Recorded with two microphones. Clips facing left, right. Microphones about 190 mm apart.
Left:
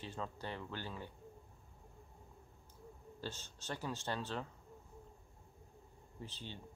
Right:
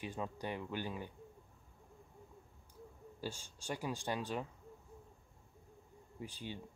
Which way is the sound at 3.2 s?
10° right (ahead or behind).